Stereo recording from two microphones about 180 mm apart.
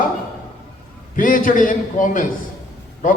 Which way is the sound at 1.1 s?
50° left (ahead or behind).